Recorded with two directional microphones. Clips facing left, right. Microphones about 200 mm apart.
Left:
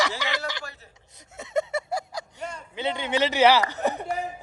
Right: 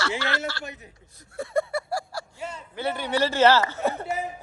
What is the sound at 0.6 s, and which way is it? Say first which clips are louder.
Speech: right 3 dB; 20° right (ahead or behind).